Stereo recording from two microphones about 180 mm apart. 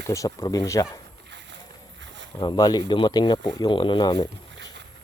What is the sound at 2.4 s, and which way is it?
Speech, 25° left (ahead or behind).